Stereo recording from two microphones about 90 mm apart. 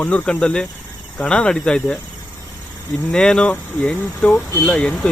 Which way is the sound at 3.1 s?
10° left (ahead or behind).